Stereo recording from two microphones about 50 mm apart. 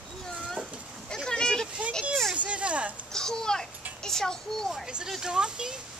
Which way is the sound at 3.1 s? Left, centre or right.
Centre.